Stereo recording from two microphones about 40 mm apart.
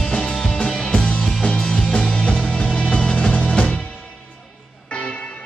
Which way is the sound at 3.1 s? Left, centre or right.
Left.